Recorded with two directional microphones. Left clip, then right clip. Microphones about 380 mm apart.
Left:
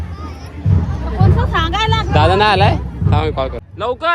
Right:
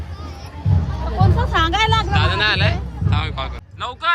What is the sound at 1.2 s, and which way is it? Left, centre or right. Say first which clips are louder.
Music: left 1 dB; right.